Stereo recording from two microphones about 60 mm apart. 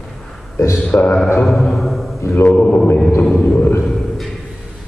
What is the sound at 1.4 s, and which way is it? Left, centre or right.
Speech, centre.